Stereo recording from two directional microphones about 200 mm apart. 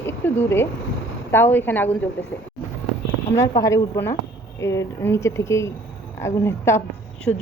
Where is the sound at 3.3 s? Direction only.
15° left (ahead or behind).